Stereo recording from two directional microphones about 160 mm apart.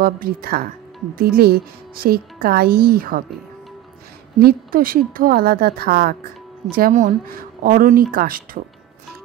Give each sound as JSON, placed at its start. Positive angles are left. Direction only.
{"t": 0.0, "sound": "a woman's voice", "side_deg": -65}
{"t": 4.4, "sound": "a woman's voice", "side_deg": -70}